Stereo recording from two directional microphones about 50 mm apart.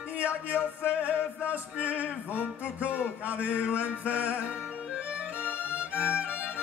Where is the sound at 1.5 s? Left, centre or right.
Right.